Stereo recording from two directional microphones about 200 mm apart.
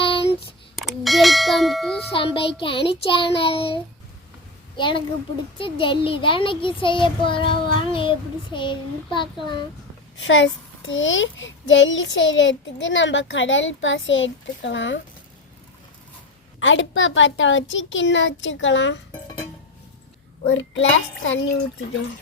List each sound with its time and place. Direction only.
0.0 s a sound: 25° left (ahead or behind)
0.8 s a sound: centre (ahead or behind)
2.1 s child singing: 25° left (ahead or behind)
4.8 s child singing: 25° left (ahead or behind)
10.2 s a child's voice: 70° left (ahead or behind)
16.6 s a child's voice: 70° left (ahead or behind)
20.5 s a child's voice: 70° left (ahead or behind)